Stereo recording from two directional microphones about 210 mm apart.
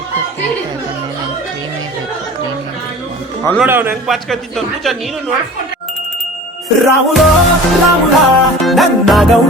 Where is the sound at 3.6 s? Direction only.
10° right (ahead or behind).